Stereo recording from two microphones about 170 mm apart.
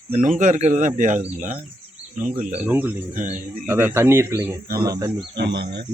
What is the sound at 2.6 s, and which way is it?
Speech, 10° right (ahead or behind).